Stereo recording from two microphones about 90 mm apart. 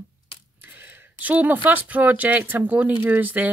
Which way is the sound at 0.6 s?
20° right (ahead or behind).